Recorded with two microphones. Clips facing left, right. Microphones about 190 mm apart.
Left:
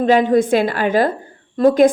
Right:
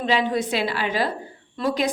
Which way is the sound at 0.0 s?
50° left (ahead or behind).